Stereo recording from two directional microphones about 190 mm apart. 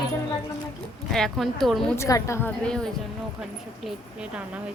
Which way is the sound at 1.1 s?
Centre (ahead or behind).